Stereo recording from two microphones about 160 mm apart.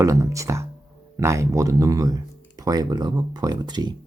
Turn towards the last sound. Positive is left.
turn(degrees=-25)  # may be behind; listen again after turning